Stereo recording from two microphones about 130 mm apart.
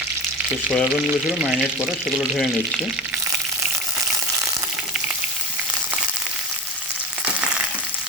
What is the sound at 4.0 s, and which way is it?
Frying, 25° right (ahead or behind).